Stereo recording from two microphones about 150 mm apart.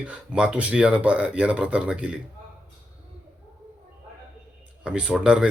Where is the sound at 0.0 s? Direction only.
10° right (ahead or behind).